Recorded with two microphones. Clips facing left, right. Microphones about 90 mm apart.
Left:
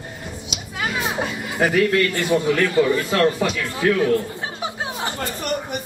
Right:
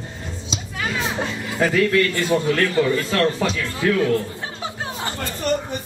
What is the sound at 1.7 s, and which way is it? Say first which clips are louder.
A man's voice: even; 20° left (ahead or behind).